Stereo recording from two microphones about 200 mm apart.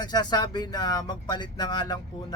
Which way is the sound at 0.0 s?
20° left (ahead or behind).